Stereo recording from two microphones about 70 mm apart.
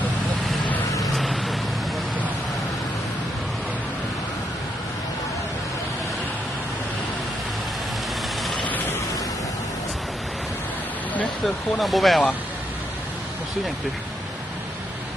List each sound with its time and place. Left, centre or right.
1.0 s vehicle: centre
8.5 s a sound: left
11.4 s speech: centre